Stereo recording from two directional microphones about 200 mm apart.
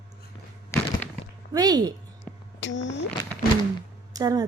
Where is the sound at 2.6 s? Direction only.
65° left (ahead or behind).